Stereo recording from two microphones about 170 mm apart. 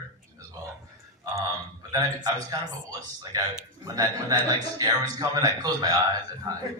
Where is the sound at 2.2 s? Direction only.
25° right (ahead or behind).